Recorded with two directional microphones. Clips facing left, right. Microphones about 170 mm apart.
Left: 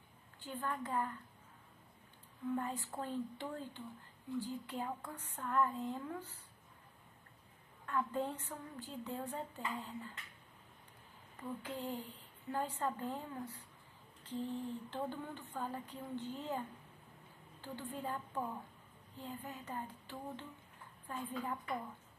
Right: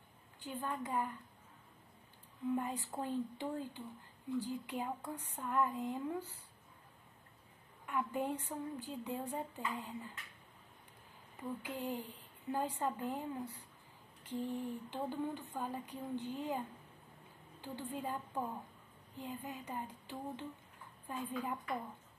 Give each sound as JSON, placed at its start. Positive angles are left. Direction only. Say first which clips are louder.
{"t": 0.4, "sound": "a woman's voice", "louder": "even", "side_deg": -15}
{"t": 2.5, "sound": "a woman's voice", "louder": "right 1 dB", "side_deg": -15}
{"t": 7.8, "sound": "a woman's voice", "louder": "even", "side_deg": -15}
{"t": 11.6, "sound": "a woman's voice", "louder": "right 1 dB", "side_deg": -10}
{"t": 17.9, "sound": "a woman's voice", "louder": "right 1 dB", "side_deg": -15}